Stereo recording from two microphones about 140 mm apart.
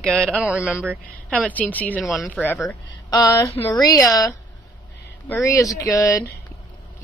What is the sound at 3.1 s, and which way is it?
Speech, 30° left (ahead or behind).